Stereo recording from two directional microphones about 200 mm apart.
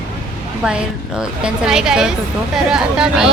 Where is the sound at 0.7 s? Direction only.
5° right (ahead or behind).